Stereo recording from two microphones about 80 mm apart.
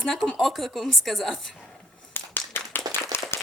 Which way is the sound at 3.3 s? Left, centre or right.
Left.